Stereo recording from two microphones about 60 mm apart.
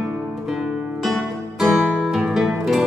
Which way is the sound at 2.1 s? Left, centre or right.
Centre.